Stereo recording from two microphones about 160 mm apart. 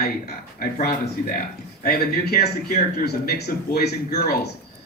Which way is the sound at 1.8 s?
80° left.